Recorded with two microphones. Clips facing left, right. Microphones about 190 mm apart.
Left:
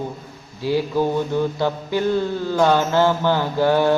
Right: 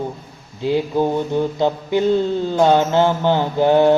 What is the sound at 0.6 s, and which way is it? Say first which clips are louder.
Speech: right 2 dB; 20° right (ahead or behind).